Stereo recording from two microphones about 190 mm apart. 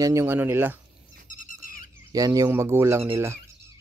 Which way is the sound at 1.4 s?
45° left (ahead or behind).